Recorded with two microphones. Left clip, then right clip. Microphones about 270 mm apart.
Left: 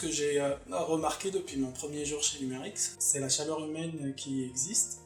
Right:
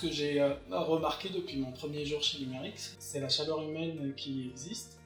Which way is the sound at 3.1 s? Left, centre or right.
Left.